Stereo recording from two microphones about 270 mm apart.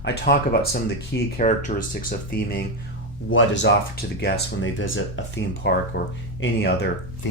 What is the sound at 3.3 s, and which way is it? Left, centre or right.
Speech, left.